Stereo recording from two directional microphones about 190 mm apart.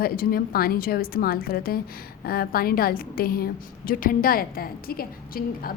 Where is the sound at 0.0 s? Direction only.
50° left (ahead or behind).